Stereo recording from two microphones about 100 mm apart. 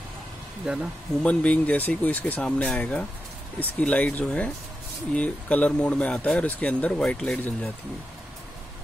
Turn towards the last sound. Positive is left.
turn(degrees=15)  # may be behind; listen again after turning